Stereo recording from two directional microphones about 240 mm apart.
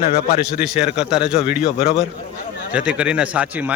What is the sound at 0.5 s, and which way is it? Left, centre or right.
Speech, centre.